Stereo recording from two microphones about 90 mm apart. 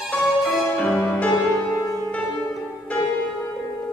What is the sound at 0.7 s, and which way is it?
Music, 15° left (ahead or behind).